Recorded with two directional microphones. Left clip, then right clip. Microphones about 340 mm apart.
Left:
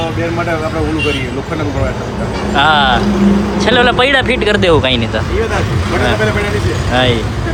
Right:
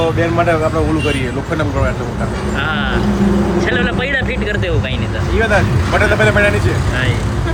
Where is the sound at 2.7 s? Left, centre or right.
Centre.